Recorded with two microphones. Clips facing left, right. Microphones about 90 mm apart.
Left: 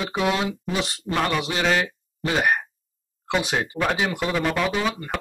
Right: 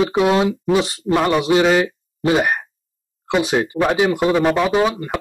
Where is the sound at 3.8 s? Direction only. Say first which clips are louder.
Right 7 dB; 15° right (ahead or behind).